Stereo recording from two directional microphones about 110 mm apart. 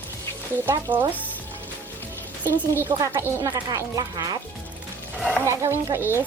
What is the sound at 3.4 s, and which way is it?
Speech, 30° right (ahead or behind).